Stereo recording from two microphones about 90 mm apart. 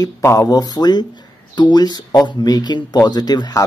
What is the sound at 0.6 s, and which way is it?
Speech, 50° left (ahead or behind).